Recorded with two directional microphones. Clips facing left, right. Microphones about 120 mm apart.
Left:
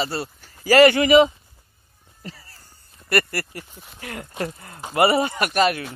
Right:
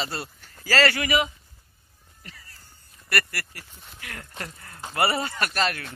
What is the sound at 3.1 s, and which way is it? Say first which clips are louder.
Speech: left 7 dB; 25° left (ahead or behind).